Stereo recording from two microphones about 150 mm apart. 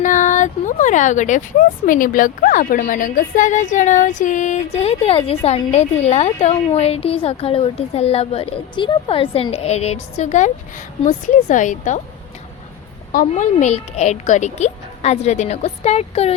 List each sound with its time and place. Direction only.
0.0 s a woman's voice: 55° left (ahead or behind)
13.1 s speech: 55° left (ahead or behind)